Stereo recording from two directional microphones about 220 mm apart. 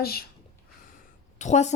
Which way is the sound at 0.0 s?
45° left (ahead or behind).